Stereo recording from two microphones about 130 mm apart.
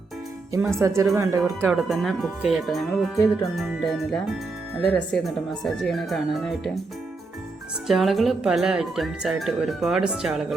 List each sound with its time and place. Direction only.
0.8 s speech: 20° right (ahead or behind)
1.7 s speech: centre (ahead or behind)
7.9 s speech: centre (ahead or behind)